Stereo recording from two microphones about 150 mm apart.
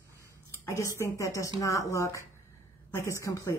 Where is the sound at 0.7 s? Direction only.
20° left (ahead or behind).